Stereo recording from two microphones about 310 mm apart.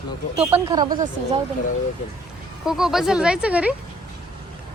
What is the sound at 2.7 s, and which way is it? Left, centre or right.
Speech, centre.